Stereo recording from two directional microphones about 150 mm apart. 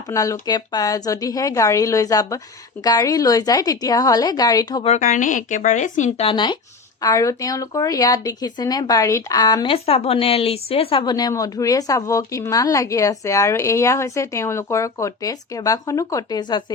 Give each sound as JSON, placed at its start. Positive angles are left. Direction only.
{"t": 0.1, "sound": "speech", "side_deg": 20}
{"t": 4.8, "sound": "speech", "side_deg": 50}
{"t": 9.6, "sound": "speech", "side_deg": 40}
{"t": 11.0, "sound": "speech", "side_deg": 25}